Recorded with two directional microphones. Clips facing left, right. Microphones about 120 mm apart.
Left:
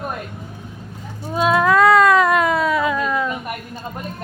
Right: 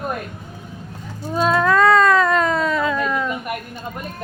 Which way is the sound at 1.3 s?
5° left (ahead or behind).